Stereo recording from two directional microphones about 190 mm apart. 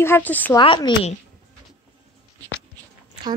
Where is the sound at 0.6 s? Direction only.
25° left (ahead or behind).